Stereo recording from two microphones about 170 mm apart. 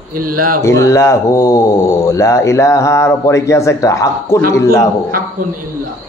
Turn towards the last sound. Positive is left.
turn(degrees=-55)  # may be behind; listen again after turning